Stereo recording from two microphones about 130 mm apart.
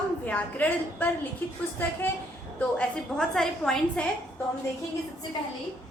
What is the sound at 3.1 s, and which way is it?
Speech, 5° left (ahead or behind).